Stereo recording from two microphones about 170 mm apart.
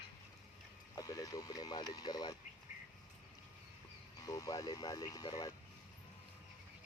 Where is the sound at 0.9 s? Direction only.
20° left (ahead or behind).